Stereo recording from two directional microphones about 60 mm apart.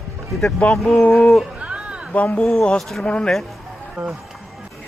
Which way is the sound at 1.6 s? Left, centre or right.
Centre.